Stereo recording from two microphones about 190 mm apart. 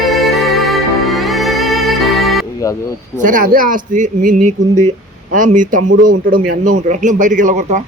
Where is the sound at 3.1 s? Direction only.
45° right (ahead or behind).